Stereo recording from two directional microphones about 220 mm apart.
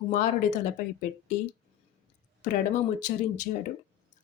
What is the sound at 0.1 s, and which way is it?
Speech, 35° left (ahead or behind).